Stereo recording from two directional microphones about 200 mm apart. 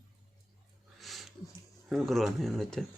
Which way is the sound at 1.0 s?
Centre (ahead or behind).